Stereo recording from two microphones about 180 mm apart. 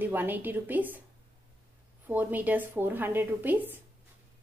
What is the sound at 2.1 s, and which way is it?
A woman's voice, 10° right (ahead or behind).